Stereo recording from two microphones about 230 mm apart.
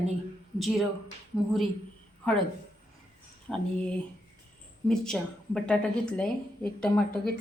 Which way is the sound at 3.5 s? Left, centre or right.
Centre.